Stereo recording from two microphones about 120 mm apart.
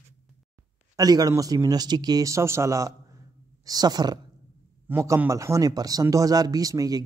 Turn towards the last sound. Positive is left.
turn(degrees=-30)  # may be behind; listen again after turning